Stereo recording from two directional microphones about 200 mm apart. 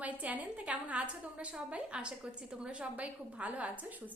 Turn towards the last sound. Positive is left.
turn(degrees=-5)  # may be behind; listen again after turning